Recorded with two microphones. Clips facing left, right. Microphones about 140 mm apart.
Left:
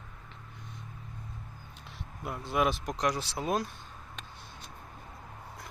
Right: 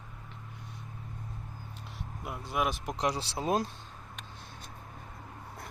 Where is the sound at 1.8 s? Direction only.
5° right (ahead or behind).